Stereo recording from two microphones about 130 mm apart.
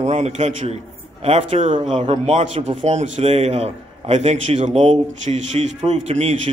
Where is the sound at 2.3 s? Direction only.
60° right (ahead or behind).